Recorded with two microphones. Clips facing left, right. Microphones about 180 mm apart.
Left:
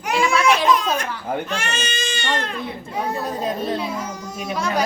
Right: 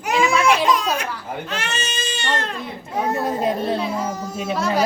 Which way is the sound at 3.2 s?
25° right (ahead or behind).